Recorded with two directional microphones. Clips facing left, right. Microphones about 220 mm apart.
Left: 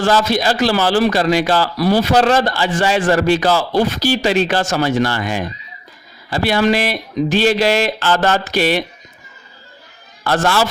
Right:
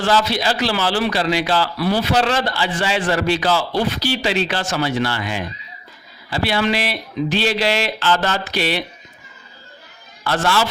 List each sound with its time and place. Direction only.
0.0 s a man's voice: 45° left (ahead or behind)
10.2 s a man's voice: 45° left (ahead or behind)